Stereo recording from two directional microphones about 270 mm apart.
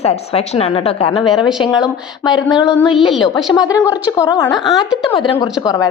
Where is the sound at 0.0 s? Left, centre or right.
Left.